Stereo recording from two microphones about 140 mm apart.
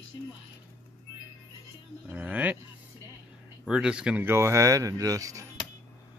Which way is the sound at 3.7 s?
5° right (ahead or behind).